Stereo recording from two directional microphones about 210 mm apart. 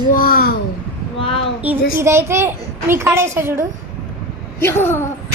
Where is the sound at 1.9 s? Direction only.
10° right (ahead or behind).